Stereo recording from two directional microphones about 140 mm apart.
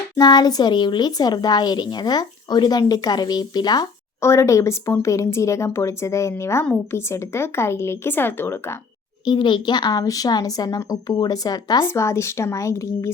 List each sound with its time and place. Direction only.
0.2 s speech: 30° left (ahead or behind)
9.2 s speech: 35° left (ahead or behind)